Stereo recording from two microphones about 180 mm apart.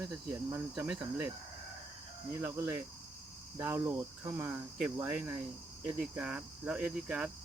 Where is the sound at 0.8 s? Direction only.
5° right (ahead or behind).